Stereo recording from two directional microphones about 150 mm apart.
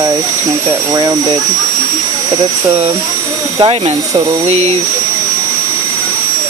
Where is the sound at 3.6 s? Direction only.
45° right (ahead or behind).